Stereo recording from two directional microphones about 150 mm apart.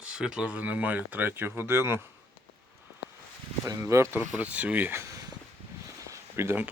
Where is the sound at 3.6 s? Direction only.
20° right (ahead or behind).